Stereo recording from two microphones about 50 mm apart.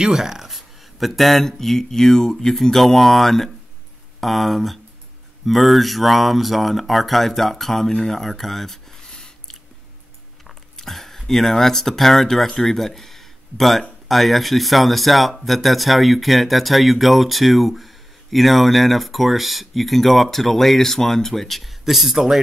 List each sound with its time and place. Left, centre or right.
0.0 s speech: centre